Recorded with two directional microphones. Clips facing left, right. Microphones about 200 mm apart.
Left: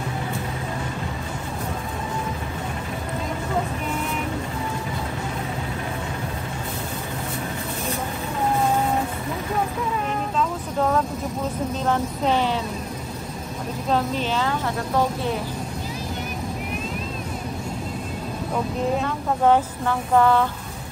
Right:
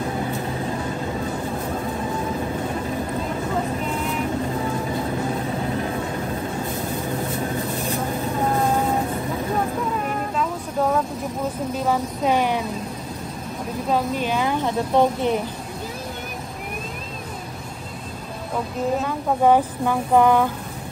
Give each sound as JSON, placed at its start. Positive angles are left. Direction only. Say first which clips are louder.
{"t": 10.0, "sound": "vehicle", "louder": "even", "side_deg": -5}
{"t": 11.8, "sound": "a woman's voice", "louder": "right 1 dB", "side_deg": -10}
{"t": 13.8, "sound": "a woman's voice", "louder": "right 1 dB", "side_deg": -10}
{"t": 18.9, "sound": "a woman's voice", "louder": "right 2 dB", "side_deg": -10}